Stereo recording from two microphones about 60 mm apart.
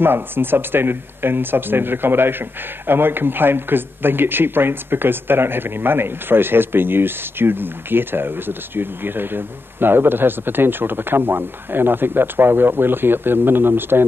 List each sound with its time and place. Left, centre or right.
0.0 s speech: right